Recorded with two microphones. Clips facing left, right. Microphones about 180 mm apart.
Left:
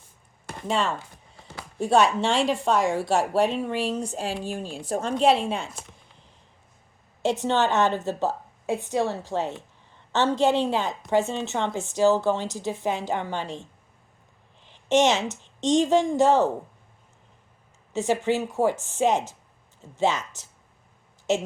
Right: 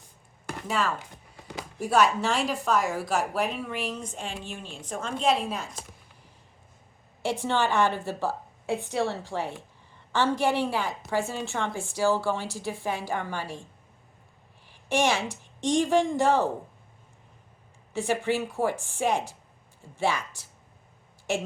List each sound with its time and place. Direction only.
0.5 s chopping: 25° left (ahead or behind)
1.8 s a woman's voice: 25° left (ahead or behind)
7.4 s a woman's voice: 20° left (ahead or behind)
18.2 s a woman's voice: 20° left (ahead or behind)